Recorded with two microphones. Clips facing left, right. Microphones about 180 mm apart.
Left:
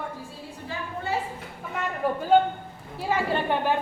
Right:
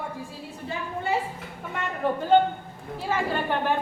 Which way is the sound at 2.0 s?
10° left (ahead or behind).